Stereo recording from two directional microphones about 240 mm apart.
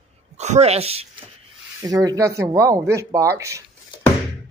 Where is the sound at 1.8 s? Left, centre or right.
Centre.